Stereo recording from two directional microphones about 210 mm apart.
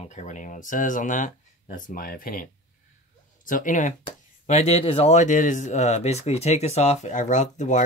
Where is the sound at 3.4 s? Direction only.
40° left (ahead or behind).